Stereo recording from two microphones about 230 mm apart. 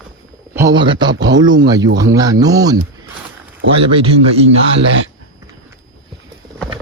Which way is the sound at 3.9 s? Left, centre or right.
Right.